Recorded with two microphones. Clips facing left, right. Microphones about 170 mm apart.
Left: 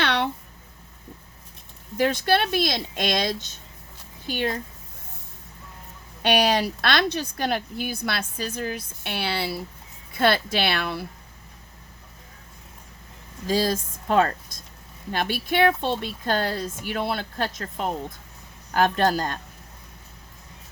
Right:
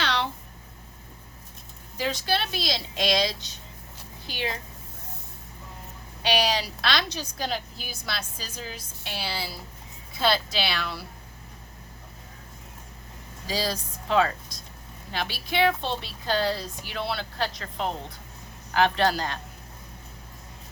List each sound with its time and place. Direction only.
0.0 s a sound: 55° left (ahead or behind)
2.0 s speech: 55° left (ahead or behind)
6.2 s a woman's voice: 55° left (ahead or behind)
13.5 s speech: 50° left (ahead or behind)